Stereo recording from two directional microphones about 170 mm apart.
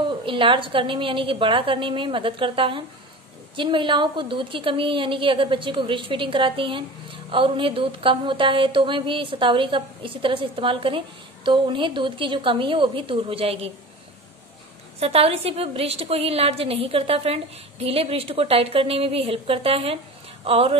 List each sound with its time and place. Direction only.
0.2 s a woman's voice: 30° right (ahead or behind)
15.0 s a woman's voice: 35° right (ahead or behind)